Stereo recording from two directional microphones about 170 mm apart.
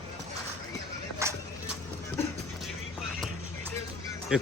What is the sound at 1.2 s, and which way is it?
Music, 15° right (ahead or behind).